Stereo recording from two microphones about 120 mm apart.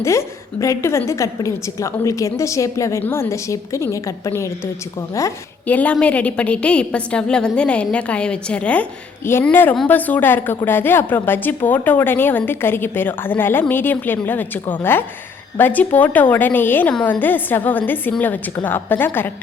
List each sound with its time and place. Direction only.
0.0 s a woman's voice: 25° left (ahead or behind)
5.6 s a woman's voice: 10° left (ahead or behind)